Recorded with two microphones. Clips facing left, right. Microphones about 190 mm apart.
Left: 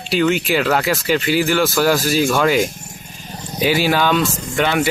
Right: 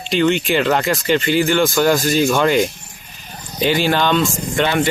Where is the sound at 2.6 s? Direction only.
45° left (ahead or behind).